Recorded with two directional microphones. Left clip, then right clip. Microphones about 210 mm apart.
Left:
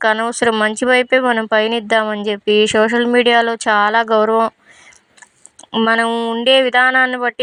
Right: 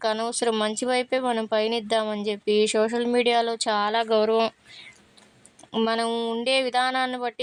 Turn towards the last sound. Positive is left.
turn(degrees=10)  # may be behind; listen again after turning